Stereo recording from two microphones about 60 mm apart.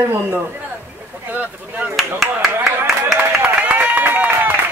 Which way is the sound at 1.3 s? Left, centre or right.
Right.